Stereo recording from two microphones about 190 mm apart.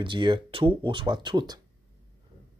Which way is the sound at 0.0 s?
25° right (ahead or behind).